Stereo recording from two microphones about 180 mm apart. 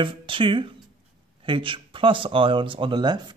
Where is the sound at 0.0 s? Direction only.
30° right (ahead or behind).